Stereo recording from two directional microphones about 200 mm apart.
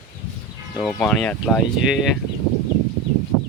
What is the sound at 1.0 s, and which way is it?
Speech, 5° left (ahead or behind).